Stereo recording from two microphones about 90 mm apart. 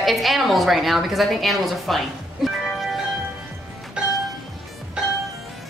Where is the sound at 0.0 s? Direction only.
Centre (ahead or behind).